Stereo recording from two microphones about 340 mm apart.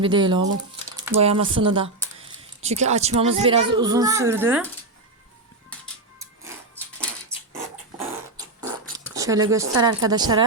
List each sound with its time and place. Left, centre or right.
0.0 s a child's voice: centre
6.1 s music: centre
7.9 s fart: centre
9.1 s a child's voice: centre